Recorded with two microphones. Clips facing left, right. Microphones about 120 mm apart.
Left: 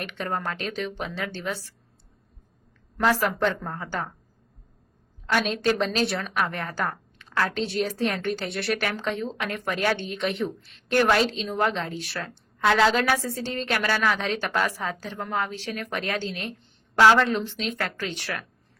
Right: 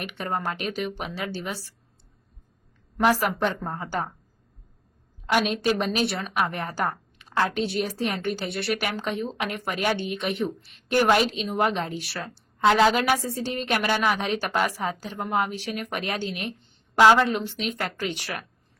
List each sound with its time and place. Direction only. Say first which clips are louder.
0.0 s a woman's voice: right 1 dB; 5° right (ahead or behind)
3.0 s a woman's voice: right 1 dB; 10° right (ahead or behind)
5.2 s a woman's voice: right 1 dB; 10° right (ahead or behind)
6.1 s a woman's voice: left 1 dB; centre (ahead or behind)
6.3 s a woman's voice: right 1 dB; 15° right (ahead or behind)
8.3 s a woman's voice: even; centre (ahead or behind)
9.0 s a woman's voice: even; 10° right (ahead or behind)